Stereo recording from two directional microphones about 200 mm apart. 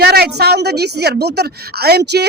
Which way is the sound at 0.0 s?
55° right (ahead or behind).